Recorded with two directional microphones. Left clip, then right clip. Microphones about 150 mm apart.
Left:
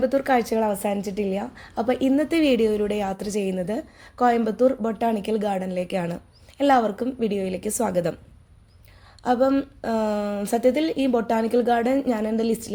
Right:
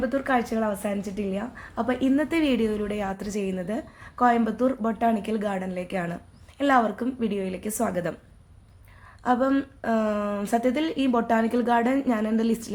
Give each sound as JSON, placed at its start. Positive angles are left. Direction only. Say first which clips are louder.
{"t": 0.0, "sound": "a woman's voice", "louder": "left 4 dB", "side_deg": 35}
{"t": 9.2, "sound": "a woman's voice", "louder": "left 3 dB", "side_deg": 25}